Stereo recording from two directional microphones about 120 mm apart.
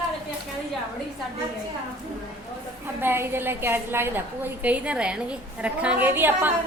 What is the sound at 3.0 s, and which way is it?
A woman's voice, 20° right (ahead or behind).